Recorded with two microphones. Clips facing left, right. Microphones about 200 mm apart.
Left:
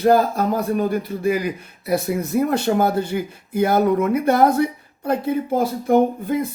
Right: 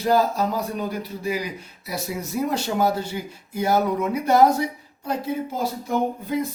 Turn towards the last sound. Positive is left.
turn(degrees=55)  # may be behind; listen again after turning